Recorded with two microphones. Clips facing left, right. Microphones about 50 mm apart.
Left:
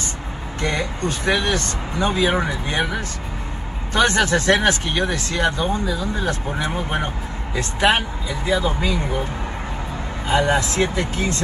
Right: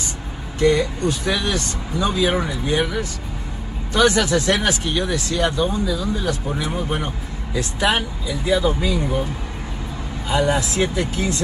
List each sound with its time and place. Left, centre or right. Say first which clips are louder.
0.6 s speech: right 6 dB; left
3.9 s speech: right 1 dB; left
10.2 s speech: left 1 dB; left